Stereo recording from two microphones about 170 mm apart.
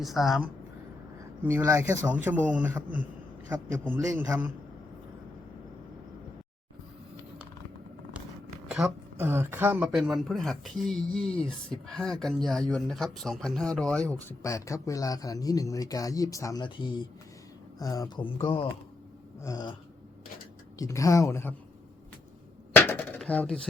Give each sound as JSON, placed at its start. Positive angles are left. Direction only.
{"t": 0.0, "sound": "speech", "side_deg": 0}
{"t": 1.5, "sound": "a man's voice", "side_deg": -15}
{"t": 8.6, "sound": "speech", "side_deg": -5}
{"t": 14.4, "sound": "speech", "side_deg": 20}
{"t": 18.3, "sound": "speech", "side_deg": 30}
{"t": 19.4, "sound": "speech", "side_deg": 20}
{"t": 20.7, "sound": "speech", "side_deg": 20}
{"t": 22.7, "sound": "a sound", "side_deg": 10}